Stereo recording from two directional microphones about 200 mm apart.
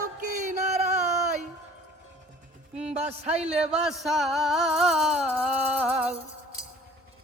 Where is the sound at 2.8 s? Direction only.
30° right (ahead or behind).